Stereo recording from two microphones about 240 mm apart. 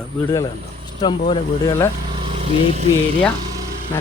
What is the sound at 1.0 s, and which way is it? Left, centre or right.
Speech, centre.